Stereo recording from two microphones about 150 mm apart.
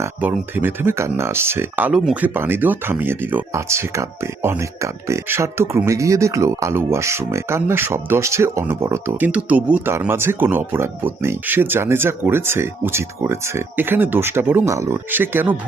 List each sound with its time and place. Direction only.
0.0 s speech: 15° right (ahead or behind)